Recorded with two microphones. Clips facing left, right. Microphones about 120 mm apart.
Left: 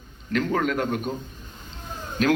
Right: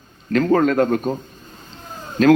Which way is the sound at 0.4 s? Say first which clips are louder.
Right 10 dB; 40° right (ahead or behind).